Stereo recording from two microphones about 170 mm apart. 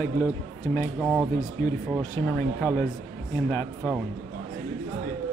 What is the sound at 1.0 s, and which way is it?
Speech, 5° right (ahead or behind).